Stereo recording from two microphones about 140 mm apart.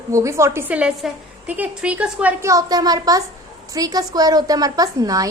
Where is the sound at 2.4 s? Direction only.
25° right (ahead or behind).